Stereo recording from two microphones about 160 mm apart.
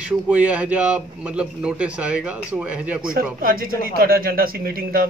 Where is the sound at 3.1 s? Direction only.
65° right (ahead or behind).